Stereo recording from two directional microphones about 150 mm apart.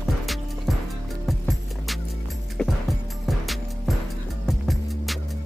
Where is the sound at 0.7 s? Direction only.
Centre (ahead or behind).